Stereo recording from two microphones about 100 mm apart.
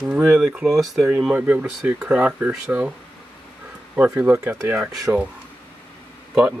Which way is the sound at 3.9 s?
10° right (ahead or behind).